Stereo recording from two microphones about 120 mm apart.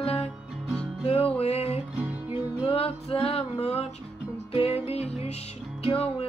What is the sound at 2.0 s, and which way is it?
Music, 15° right (ahead or behind).